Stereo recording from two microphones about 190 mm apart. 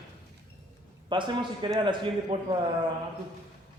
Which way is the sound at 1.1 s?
25° right (ahead or behind).